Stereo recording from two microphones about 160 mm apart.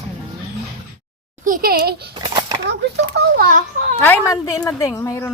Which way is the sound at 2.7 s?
80° right.